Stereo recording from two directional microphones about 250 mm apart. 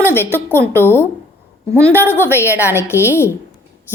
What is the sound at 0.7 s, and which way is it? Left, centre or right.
Speech, centre.